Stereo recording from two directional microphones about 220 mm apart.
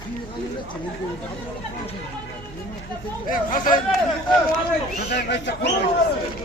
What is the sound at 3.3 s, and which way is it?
Speech, 40° left (ahead or behind).